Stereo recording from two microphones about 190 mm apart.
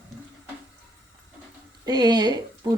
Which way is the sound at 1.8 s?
20° right (ahead or behind).